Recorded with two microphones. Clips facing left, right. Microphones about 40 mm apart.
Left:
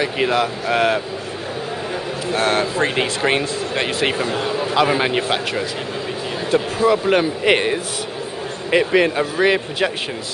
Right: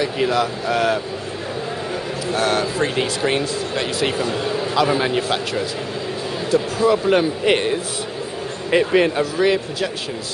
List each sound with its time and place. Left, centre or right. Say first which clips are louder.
0.0 s speech: left 1 dB; left
2.3 s speech: left 1 dB; left
6.5 s speech: even; left
6.9 s speech: even; centre
9.2 s speech: left 1 dB; left